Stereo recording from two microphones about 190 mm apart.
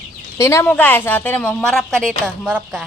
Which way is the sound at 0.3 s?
15° left (ahead or behind).